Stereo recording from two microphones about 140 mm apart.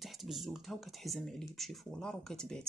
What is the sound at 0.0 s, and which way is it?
Speech, centre (ahead or behind).